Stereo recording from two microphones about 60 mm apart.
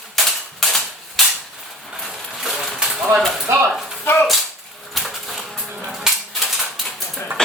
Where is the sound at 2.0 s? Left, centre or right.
Centre.